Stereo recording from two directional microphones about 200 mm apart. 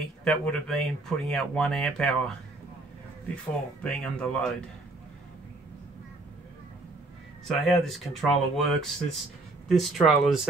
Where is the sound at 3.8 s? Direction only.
5° left (ahead or behind).